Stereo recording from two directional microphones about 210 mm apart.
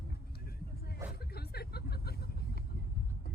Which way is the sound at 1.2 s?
50° left (ahead or behind).